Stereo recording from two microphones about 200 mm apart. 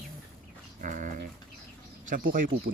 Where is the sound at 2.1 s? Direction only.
45° right (ahead or behind).